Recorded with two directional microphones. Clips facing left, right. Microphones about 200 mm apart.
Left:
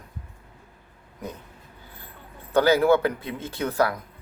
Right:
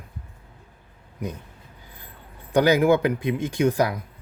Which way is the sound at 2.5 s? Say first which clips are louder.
Right 1 dB; 15° right (ahead or behind).